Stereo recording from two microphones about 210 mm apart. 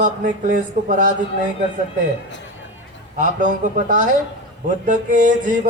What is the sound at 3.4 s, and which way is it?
Mantra, 40° right (ahead or behind).